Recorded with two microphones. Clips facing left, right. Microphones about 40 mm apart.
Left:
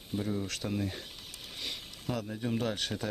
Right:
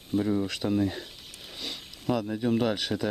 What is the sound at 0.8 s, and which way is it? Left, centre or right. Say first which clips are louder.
Speech: right 8 dB; right.